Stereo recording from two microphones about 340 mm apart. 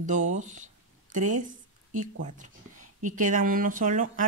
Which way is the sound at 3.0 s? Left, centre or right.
Right.